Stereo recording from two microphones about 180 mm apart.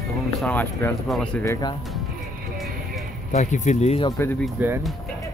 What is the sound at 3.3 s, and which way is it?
Speech, 40° left (ahead or behind).